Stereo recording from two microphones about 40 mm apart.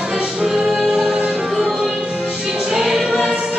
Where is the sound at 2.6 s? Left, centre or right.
Centre.